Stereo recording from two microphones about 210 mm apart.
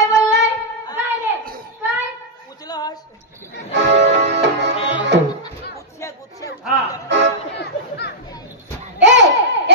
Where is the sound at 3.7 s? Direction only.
55° right (ahead or behind).